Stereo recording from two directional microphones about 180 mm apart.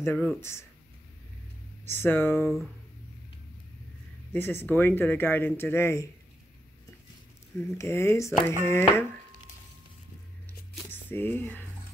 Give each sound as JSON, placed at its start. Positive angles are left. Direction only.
{"t": 0.0, "sound": "speech", "side_deg": 10}
{"t": 1.9, "sound": "speech", "side_deg": 10}
{"t": 2.4, "sound": "speech", "side_deg": 0}
{"t": 4.3, "sound": "speech", "side_deg": 10}
{"t": 7.7, "sound": "speech", "side_deg": 15}
{"t": 10.9, "sound": "speech", "side_deg": 10}